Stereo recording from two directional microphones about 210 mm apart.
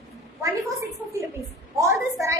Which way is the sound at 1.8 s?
15° right (ahead or behind).